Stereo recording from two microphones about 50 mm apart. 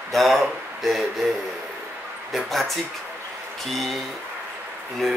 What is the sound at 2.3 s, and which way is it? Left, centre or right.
Speech, centre.